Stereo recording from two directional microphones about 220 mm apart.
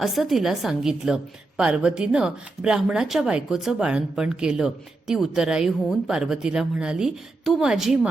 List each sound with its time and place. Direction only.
0.0 s a woman's voice: centre (ahead or behind)